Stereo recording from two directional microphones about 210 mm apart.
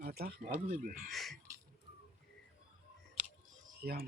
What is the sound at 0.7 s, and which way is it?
Speech, 35° right (ahead or behind).